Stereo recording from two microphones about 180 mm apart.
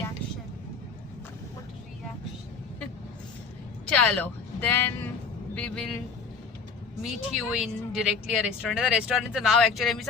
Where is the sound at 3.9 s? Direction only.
5° left (ahead or behind).